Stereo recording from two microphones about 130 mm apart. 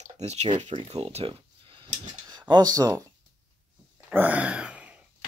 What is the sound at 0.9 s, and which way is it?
Speech, 55° right (ahead or behind).